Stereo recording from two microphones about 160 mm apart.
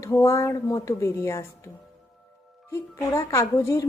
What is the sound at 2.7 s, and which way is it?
A woman's voice, 20° left (ahead or behind).